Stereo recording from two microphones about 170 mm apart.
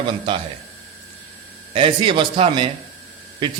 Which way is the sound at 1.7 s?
30° right (ahead or behind).